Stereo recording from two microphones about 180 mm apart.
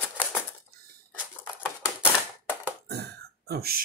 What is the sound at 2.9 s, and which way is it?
Throat clearing, 65° right (ahead or behind).